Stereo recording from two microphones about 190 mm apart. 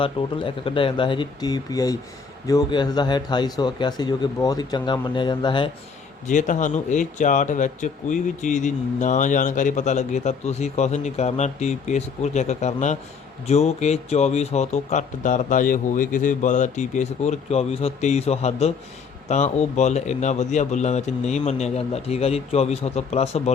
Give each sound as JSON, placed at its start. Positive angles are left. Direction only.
{"t": 0.0, "sound": "speech", "side_deg": 25}
{"t": 6.2, "sound": "speech", "side_deg": 40}